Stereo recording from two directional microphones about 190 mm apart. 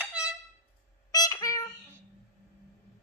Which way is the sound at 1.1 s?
20° left (ahead or behind).